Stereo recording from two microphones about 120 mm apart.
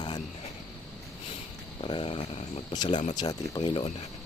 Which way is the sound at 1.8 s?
50° left (ahead or behind).